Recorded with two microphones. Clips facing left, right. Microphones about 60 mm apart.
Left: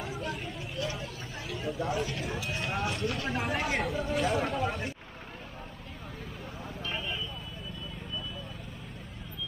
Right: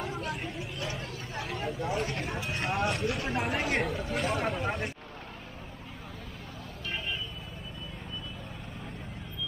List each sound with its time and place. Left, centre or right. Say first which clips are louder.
1.6 s a sound: left 1 dB; centre
2.0 s speech: right 1 dB; right
2.2 s speech: right 1 dB; centre